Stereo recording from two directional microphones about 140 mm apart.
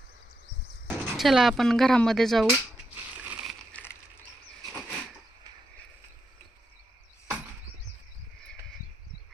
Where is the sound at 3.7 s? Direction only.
15° left (ahead or behind).